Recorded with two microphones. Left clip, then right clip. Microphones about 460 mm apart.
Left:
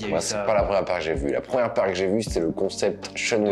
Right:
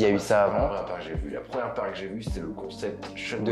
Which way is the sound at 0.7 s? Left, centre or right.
Left.